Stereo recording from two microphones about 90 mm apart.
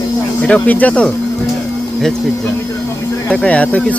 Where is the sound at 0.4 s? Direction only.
15° left (ahead or behind).